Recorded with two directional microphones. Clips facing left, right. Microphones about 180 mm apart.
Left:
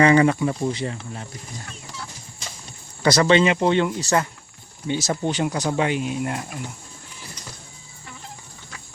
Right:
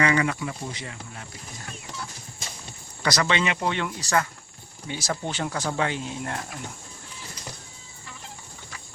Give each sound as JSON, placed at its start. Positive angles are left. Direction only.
{"t": 0.0, "sound": "speech", "side_deg": 30}
{"t": 3.0, "sound": "speech", "side_deg": 30}